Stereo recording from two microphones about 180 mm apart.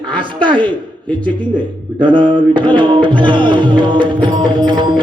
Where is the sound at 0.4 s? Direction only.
25° right (ahead or behind).